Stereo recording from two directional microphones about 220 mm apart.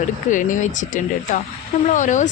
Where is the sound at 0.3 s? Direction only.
35° left (ahead or behind).